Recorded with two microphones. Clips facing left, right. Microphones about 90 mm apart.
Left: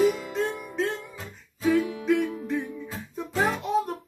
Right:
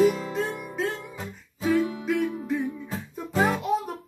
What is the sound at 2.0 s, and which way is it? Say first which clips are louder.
Music: left 2 dB; centre (ahead or behind).